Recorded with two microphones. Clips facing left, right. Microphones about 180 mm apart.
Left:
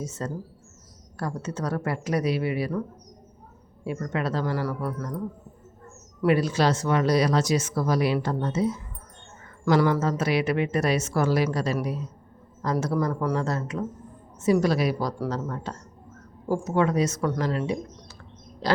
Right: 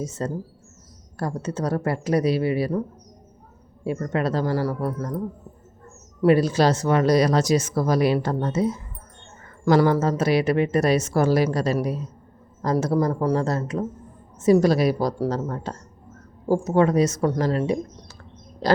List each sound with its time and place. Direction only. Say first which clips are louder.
0.0 s speech: right 4 dB; 35° right (ahead or behind)
3.8 s speech: right 4 dB; 35° right (ahead or behind)
6.2 s speech: right 4 dB; 40° right (ahead or behind)
18.6 s a sound: right 5 dB; 45° right (ahead or behind)